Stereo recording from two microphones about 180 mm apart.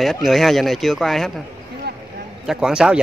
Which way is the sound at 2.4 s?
5° right (ahead or behind).